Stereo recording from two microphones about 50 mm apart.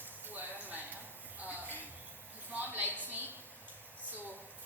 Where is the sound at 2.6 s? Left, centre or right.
Right.